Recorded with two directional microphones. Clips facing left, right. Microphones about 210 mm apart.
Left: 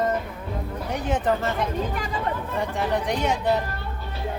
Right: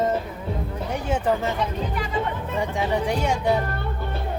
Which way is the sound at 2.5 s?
15° right (ahead or behind).